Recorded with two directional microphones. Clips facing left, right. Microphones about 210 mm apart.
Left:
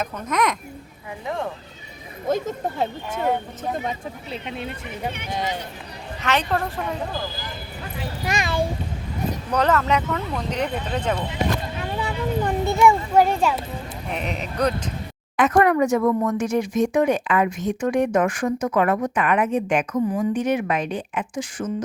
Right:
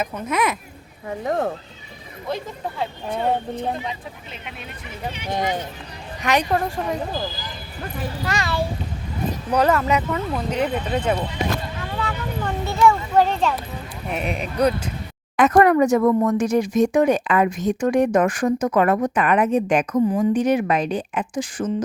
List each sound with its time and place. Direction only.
0.0 s speech: 10° right (ahead or behind)
1.0 s speech: 45° right (ahead or behind)
2.2 s speech: 45° left (ahead or behind)
6.2 s speech: 15° right (ahead or behind)
8.2 s a child's voice: 15° left (ahead or behind)
9.5 s speech: 10° right (ahead or behind)
11.8 s a child's voice: 20° left (ahead or behind)
14.1 s speech: 10° right (ahead or behind)
15.4 s speech: 40° right (ahead or behind)